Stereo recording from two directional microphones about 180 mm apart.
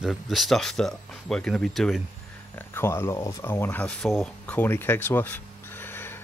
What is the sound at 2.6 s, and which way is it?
Speech, 10° left (ahead or behind).